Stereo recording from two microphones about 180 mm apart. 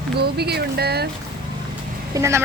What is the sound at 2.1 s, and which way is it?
Speech, 15° right (ahead or behind).